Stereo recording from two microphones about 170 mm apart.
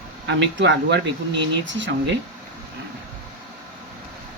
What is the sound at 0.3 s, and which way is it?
Speech, 90° right.